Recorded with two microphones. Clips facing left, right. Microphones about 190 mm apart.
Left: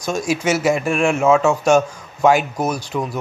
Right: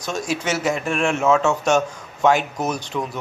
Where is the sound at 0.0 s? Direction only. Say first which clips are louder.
Left 5 dB; 10° left (ahead or behind).